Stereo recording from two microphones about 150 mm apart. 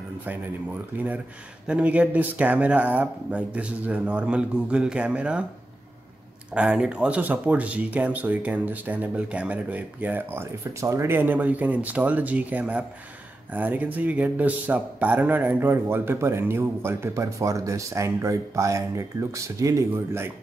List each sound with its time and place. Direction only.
0.9 s a man's voice: 10° right (ahead or behind)
6.5 s a man's voice: 5° right (ahead or behind)